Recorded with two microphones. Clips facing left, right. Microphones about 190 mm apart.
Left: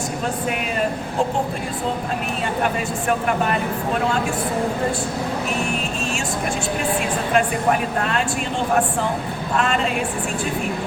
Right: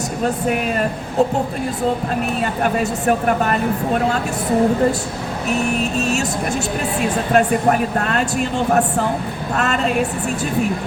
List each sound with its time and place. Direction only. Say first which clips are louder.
3.1 s speech: right 3 dB; 45° right (ahead or behind)
7.3 s speech: right 4 dB; 45° right (ahead or behind)